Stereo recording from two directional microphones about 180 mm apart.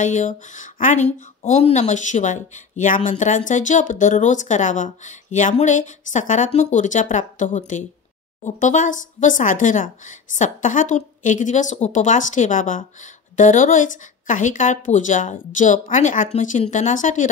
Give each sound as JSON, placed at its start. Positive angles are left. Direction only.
{"t": 0.0, "sound": "speech", "side_deg": 45}